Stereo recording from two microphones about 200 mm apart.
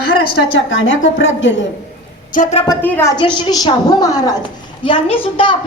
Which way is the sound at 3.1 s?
25° left (ahead or behind).